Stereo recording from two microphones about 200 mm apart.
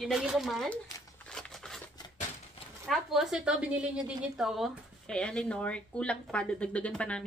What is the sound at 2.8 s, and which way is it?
A woman's voice, centre (ahead or behind).